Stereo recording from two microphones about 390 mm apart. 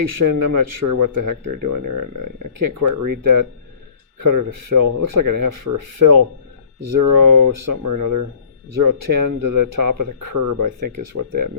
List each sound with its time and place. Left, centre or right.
0.3 s speech: right